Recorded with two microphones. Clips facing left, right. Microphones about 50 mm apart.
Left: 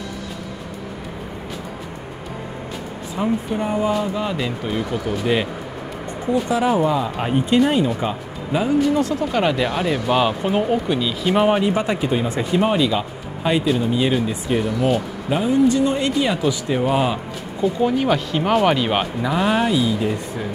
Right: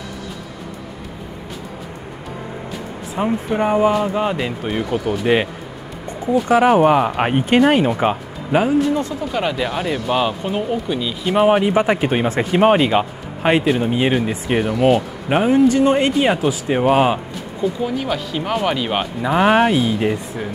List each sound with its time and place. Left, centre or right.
3.2 s speech: right
6.5 s speech: right
9.3 s speech: centre
11.0 s speech: centre
11.6 s speech: right
12.0 s speech: right
17.8 s speech: centre
19.3 s speech: right